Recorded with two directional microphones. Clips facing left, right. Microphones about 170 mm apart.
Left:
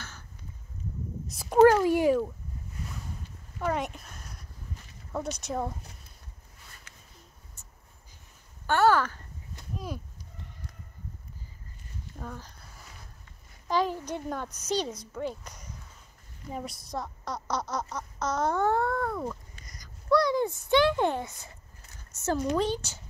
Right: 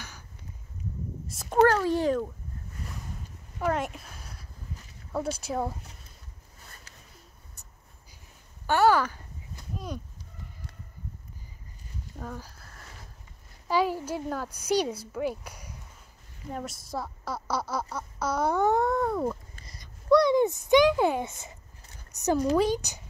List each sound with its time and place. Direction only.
1.3 s cat: centre (ahead or behind)
1.7 s cat: 15° left (ahead or behind)
3.5 s a sound: centre (ahead or behind)
5.1 s speech: 5° right (ahead or behind)
6.9 s a sound: 35° right (ahead or behind)
8.6 s speech: 10° right (ahead or behind)
12.2 s speech: 5° right (ahead or behind); by 19.3 s 20° right (ahead or behind)
19.6 s a sound: 25° right (ahead or behind); by 21.2 s 10° right (ahead or behind)
21.2 s speech: 20° right (ahead or behind)